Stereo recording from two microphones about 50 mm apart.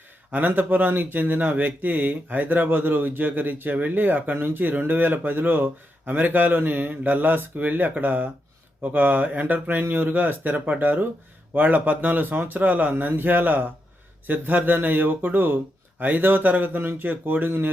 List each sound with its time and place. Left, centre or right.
0.3 s speech: right